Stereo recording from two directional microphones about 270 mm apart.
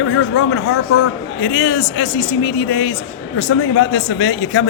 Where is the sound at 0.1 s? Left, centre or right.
Left.